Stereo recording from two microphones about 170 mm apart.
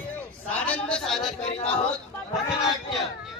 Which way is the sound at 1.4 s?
40° left (ahead or behind).